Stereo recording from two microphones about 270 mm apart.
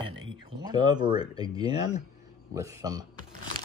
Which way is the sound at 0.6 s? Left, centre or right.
Centre.